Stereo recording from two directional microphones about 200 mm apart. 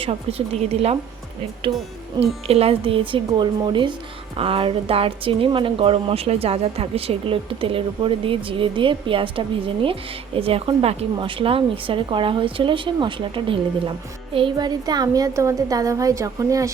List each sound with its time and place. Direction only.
0.0 s a woman's voice: 30° right (ahead or behind)
2.2 s a woman's voice: 30° right (ahead or behind)